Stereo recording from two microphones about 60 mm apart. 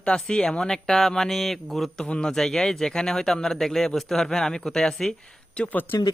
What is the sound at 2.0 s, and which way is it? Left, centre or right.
Speech, centre.